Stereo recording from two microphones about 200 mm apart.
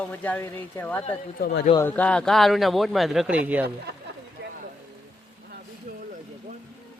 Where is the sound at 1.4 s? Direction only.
55° left (ahead or behind).